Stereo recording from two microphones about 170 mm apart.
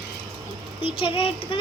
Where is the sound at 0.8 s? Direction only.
30° left (ahead or behind).